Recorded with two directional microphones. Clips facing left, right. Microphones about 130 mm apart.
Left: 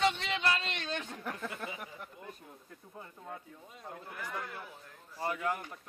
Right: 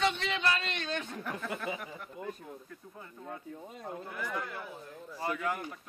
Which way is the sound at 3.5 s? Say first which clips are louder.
Right 6 dB; 45° right (ahead or behind).